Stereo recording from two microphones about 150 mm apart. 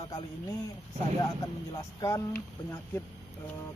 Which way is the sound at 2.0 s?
20° left (ahead or behind).